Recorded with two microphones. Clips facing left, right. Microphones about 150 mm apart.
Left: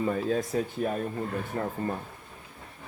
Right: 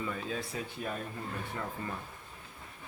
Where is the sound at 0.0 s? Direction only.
45° left (ahead or behind).